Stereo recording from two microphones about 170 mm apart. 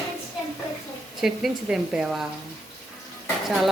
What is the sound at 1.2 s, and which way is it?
A woman's voice, 5° right (ahead or behind).